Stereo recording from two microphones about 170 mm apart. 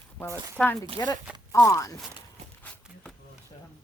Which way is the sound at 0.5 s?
10° left (ahead or behind).